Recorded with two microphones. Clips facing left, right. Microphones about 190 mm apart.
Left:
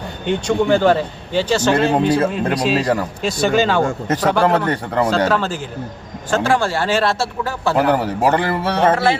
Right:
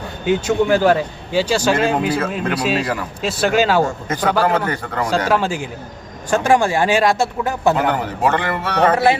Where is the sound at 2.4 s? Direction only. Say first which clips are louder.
Left 2 dB; 35° left (ahead or behind).